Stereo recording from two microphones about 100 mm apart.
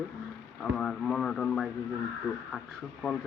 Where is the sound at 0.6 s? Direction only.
5° left (ahead or behind).